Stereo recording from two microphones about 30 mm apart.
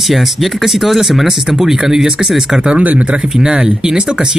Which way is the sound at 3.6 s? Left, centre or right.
Right.